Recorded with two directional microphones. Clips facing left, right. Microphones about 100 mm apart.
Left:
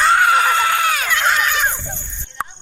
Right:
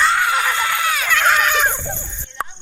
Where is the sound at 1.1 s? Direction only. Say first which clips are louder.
Right 1 dB; centre (ahead or behind).